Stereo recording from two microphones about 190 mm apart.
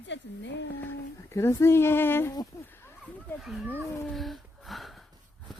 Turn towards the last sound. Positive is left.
turn(degrees=0)  # may be behind; listen again after turning